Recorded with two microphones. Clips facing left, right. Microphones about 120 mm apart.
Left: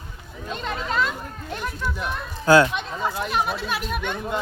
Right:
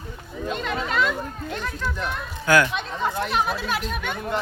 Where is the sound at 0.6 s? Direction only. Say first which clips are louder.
Even; 35° left (ahead or behind).